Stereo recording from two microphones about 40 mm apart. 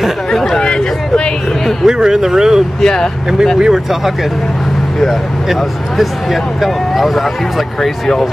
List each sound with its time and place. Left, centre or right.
0.3 s a sound: centre
1.9 s speech: centre
2.8 s speech: centre
3.5 s speech: centre
5.5 s speech: centre